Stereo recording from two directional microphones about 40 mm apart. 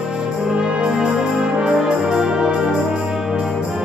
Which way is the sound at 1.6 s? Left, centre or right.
Centre.